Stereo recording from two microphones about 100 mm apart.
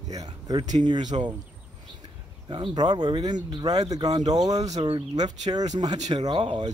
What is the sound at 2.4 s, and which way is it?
Speech, 55° right (ahead or behind).